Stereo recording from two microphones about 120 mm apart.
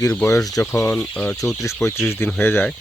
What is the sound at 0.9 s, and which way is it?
Speech, 15° left (ahead or behind).